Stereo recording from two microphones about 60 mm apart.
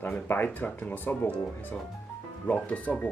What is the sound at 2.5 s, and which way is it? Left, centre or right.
Speech, centre.